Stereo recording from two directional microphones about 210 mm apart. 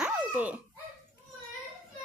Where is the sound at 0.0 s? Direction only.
5° right (ahead or behind).